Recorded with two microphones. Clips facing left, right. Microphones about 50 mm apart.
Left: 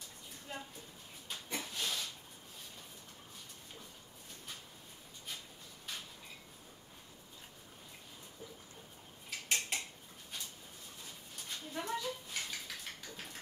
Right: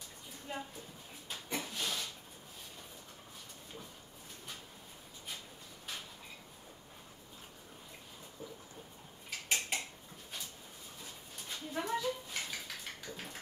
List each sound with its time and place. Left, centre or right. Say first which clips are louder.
0.5 s a woman's voice: right 4 dB; centre
1.3 s a sound: right 2 dB; centre
9.3 s mechanisms: right 1 dB; centre
11.0 s dog: right 1 dB; centre